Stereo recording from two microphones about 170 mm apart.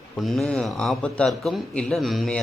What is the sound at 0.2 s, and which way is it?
Speech, centre (ahead or behind).